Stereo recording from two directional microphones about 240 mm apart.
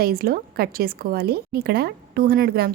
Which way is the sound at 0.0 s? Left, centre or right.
Right.